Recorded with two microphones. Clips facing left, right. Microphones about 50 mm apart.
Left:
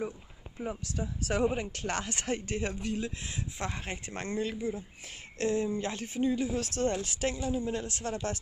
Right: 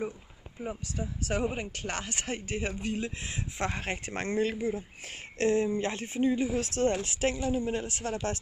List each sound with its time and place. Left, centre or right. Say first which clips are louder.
0.6 s speech: even; centre
2.9 s speech: right 1 dB; right; by 8.4 s centre